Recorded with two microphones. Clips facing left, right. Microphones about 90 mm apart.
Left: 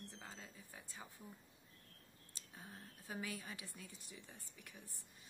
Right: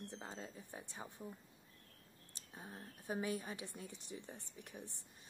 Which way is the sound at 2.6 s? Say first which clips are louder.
Right 4 dB; 20° right (ahead or behind).